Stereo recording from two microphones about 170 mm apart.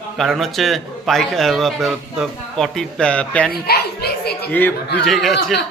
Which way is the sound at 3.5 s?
65° left (ahead or behind).